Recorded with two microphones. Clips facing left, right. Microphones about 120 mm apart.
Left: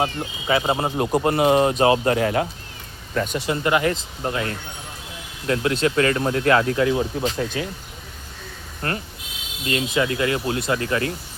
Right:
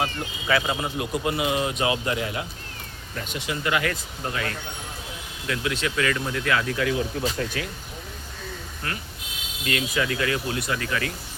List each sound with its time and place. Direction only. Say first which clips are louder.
0.0 s speech: left 4 dB; 25° left (ahead or behind)
0.9 s speech: left 6 dB; 45° left (ahead or behind)
3.3 s speech: left 4 dB; 40° left (ahead or behind)
8.8 s speech: left 7 dB; 50° left (ahead or behind)
9.6 s speech: left 4 dB; 25° left (ahead or behind)